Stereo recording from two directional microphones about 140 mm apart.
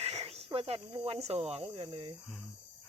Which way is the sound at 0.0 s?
45° right (ahead or behind).